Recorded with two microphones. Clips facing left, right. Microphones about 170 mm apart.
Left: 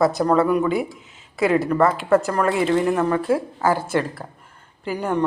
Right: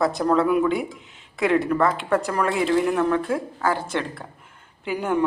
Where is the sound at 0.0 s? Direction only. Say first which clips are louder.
Left 2 dB; centre (ahead or behind).